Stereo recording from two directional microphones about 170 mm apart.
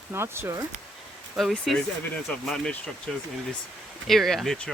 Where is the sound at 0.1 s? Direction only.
15° right (ahead or behind).